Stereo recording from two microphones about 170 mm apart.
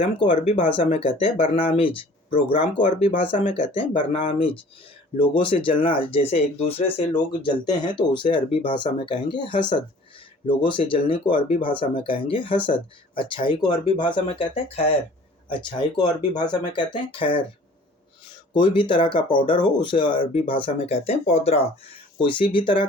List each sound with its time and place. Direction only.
0.0 s speech: 30° left (ahead or behind)
18.5 s speech: 30° left (ahead or behind)